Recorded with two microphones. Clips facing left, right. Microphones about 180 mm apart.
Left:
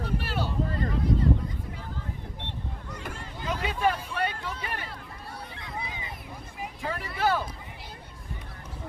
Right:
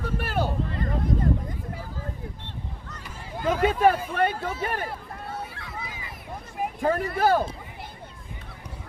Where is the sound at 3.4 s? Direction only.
50° right (ahead or behind).